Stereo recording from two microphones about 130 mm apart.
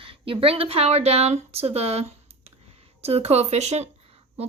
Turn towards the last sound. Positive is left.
turn(degrees=-60)  # may be behind; listen again after turning